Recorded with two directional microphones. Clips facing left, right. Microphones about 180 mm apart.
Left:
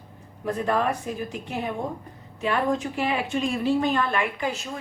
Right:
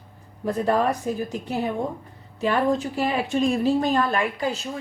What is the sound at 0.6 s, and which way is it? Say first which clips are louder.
A woman's voice: right 3 dB; 35° right (ahead or behind).